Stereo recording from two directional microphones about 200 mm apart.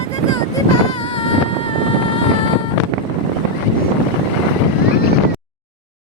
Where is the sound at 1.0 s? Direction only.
25° left (ahead or behind).